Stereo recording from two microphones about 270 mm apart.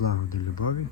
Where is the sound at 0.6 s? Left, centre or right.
Left.